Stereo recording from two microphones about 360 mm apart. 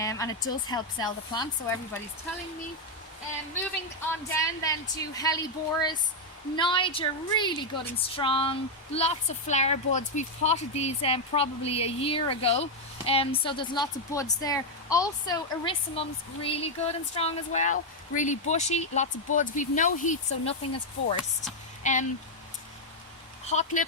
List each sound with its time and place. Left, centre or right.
0.0 s a woman's voice: centre
4.3 s a woman's voice: centre
23.5 s speech: centre